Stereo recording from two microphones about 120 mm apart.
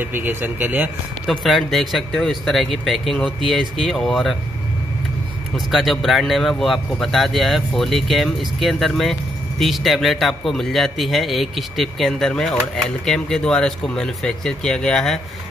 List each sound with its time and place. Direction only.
0.0 s speech: 15° right (ahead or behind)
1.2 s speech: centre (ahead or behind)
5.7 s speech: centre (ahead or behind)